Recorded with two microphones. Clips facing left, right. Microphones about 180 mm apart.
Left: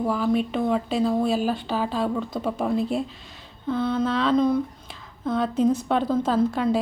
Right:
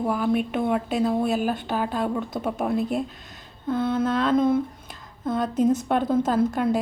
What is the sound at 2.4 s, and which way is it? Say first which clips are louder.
A woman's voice: left 1 dB; 5° right (ahead or behind).